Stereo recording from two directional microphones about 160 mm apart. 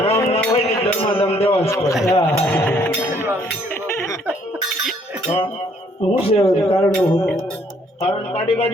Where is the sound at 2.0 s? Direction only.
15° left (ahead or behind).